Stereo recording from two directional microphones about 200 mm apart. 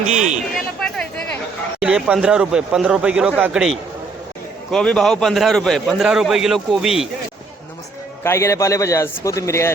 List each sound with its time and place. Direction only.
0.1 s speech: 35° right (ahead or behind)
1.8 s a man's voice: 5° right (ahead or behind)
8.2 s a man's voice: 15° left (ahead or behind)